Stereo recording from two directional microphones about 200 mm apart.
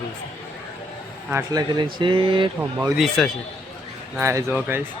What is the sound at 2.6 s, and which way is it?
Speech, 10° right (ahead or behind).